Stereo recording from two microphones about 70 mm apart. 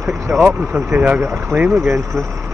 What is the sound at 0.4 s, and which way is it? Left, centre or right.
Speech, right.